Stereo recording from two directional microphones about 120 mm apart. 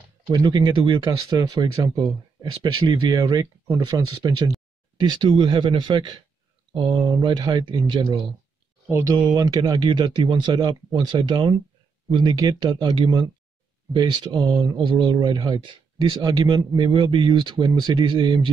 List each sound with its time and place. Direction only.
0.3 s speech: 35° right (ahead or behind)
8.8 s speech: 20° right (ahead or behind)
9.3 s speech: 30° right (ahead or behind)